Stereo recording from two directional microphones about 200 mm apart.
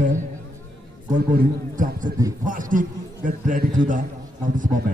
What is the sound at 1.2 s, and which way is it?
A man's voice, 50° right (ahead or behind).